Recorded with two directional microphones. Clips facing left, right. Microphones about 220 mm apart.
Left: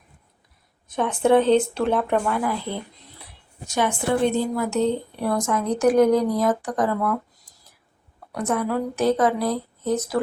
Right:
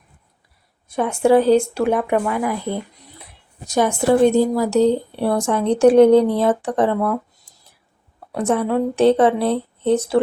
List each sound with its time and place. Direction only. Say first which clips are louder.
0.9 s speech: right 3 dB; 10° right (ahead or behind)
3.7 s a woman's voice: right 6 dB; 40° right (ahead or behind)